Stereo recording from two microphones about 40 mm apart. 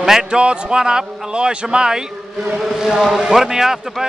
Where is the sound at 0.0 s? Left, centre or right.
Centre.